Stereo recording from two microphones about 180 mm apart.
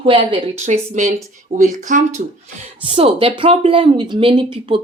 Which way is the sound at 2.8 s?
30° right (ahead or behind).